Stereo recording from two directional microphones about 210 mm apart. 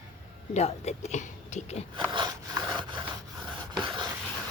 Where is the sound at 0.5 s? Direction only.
30° left (ahead or behind).